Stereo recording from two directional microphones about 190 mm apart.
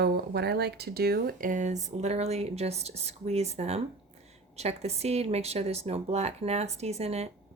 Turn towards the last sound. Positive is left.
turn(degrees=-35)  # may be behind; listen again after turning